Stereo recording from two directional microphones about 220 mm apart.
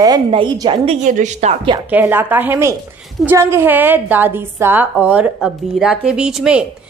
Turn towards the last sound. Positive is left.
turn(degrees=-5)  # may be behind; listen again after turning